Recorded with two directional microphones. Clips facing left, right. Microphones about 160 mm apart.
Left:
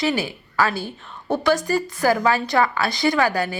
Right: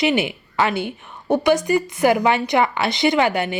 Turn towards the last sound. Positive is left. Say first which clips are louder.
# right 2 dB
turn(degrees=-20)  # may be behind; listen again after turning